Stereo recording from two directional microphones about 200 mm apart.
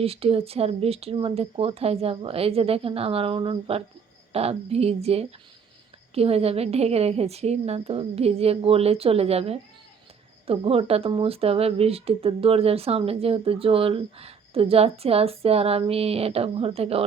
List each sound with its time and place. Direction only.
0.0 s a woman's voice: 30° right (ahead or behind)